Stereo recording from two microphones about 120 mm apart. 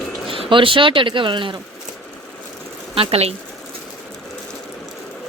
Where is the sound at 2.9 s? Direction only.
55° right (ahead or behind).